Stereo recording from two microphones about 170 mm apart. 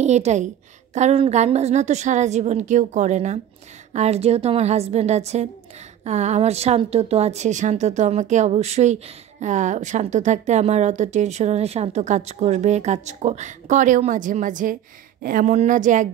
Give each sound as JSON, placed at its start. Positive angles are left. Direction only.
{"t": 0.0, "sound": "a woman's voice", "side_deg": -40}